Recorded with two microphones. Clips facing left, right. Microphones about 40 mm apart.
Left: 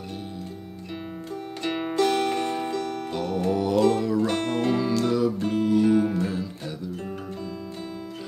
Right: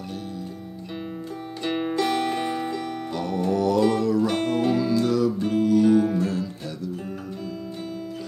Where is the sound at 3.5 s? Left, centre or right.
Centre.